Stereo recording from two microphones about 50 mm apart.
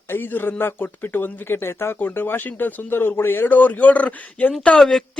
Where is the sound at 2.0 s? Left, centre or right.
Left.